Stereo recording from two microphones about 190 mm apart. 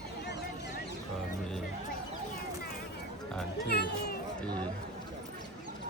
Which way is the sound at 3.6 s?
60° left (ahead or behind).